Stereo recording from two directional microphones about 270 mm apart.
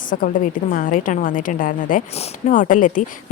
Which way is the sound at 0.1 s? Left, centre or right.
Left.